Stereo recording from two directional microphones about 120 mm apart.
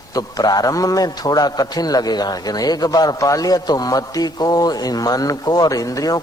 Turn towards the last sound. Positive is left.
turn(degrees=30)  # may be behind; listen again after turning